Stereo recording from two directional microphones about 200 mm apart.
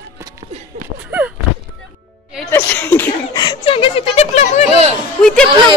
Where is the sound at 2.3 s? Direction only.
10° left (ahead or behind).